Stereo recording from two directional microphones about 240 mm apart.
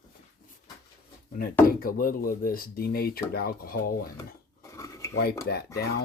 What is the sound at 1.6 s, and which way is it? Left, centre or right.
Speech, left.